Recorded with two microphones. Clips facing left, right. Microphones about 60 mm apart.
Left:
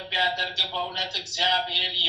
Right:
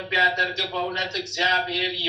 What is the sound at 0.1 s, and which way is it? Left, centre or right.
Speech, right.